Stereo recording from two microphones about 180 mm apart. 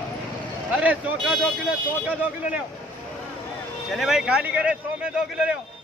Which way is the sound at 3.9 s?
Centre (ahead or behind).